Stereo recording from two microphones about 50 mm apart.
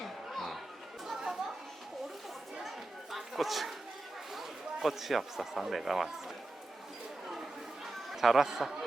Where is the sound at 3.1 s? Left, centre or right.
Centre.